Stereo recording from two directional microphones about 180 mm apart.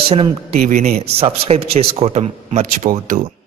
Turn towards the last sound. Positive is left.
turn(degrees=-45)  # may be behind; listen again after turning